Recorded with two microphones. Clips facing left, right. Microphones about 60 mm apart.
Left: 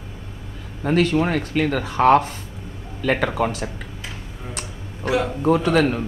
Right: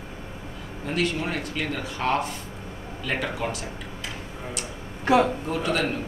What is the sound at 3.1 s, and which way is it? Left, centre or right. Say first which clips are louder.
Speech: left 8 dB; left.